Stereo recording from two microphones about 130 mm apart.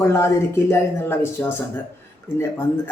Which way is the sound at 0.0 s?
20° left (ahead or behind).